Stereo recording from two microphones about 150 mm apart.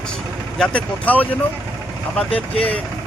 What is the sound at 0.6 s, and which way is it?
Speech, 10° left (ahead or behind).